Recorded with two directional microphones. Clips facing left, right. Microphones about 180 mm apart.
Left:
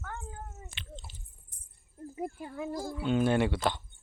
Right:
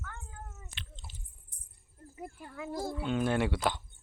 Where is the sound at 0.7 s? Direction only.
Centre (ahead or behind).